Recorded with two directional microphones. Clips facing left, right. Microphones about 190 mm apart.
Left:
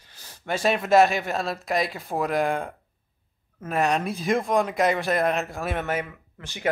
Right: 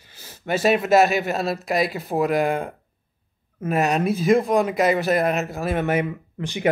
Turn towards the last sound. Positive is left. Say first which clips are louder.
# right 7 dB
turn(degrees=-15)  # may be behind; listen again after turning